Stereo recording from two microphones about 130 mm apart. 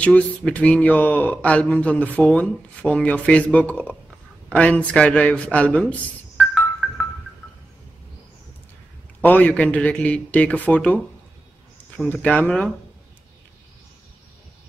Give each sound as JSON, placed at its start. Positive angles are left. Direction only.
{"t": 0.0, "sound": "speech", "side_deg": 10}
{"t": 6.3, "sound": "music", "side_deg": 0}
{"t": 9.2, "sound": "speech", "side_deg": 10}
{"t": 12.2, "sound": "speech", "side_deg": 10}